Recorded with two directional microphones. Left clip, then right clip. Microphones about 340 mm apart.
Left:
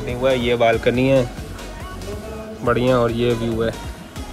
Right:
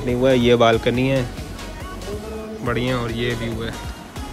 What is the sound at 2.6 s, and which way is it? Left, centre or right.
Speech, centre.